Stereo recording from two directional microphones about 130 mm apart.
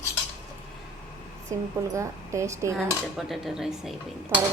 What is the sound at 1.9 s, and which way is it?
Speech, 25° right (ahead or behind).